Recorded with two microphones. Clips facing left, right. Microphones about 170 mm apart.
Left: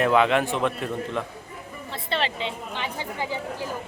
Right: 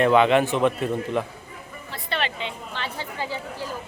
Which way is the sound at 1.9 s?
25° left (ahead or behind).